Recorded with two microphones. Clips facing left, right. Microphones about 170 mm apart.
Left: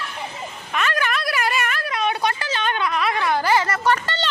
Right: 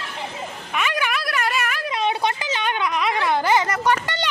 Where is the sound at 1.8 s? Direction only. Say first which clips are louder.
Even; 20° right (ahead or behind).